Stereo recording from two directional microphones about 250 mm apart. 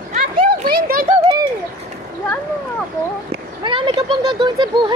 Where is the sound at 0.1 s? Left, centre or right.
Right.